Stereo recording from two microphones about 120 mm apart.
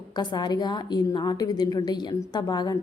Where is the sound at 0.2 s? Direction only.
35° left (ahead or behind).